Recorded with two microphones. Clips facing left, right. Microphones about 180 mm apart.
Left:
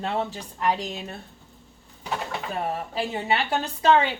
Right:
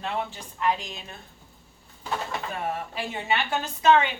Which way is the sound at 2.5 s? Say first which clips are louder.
Left 2 dB; 30° left (ahead or behind).